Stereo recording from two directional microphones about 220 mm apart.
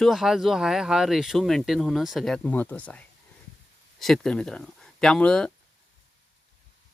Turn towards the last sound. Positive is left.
turn(degrees=5)  # may be behind; listen again after turning